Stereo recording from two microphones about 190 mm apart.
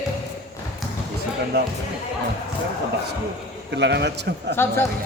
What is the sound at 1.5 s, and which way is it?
Speech, 60° right (ahead or behind).